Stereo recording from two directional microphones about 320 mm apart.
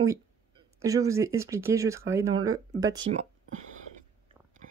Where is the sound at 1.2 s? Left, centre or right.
Centre.